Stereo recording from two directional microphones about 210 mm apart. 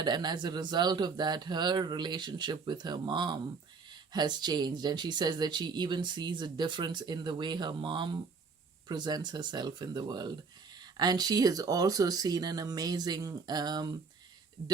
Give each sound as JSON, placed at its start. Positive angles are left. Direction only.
{"t": 0.0, "sound": "speech", "side_deg": -20}